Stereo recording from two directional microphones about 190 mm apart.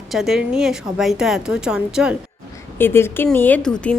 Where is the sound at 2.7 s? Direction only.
10° left (ahead or behind).